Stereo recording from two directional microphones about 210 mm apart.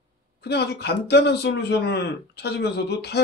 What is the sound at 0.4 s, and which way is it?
A man's voice, 50° left (ahead or behind).